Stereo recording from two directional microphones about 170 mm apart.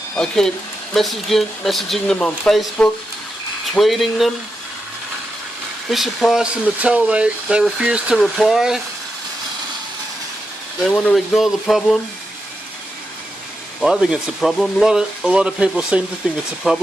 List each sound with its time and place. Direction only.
0.2 s speech: 5° left (ahead or behind)
5.9 s speech: centre (ahead or behind)
10.8 s speech: 5° left (ahead or behind)
13.8 s speech: 5° right (ahead or behind)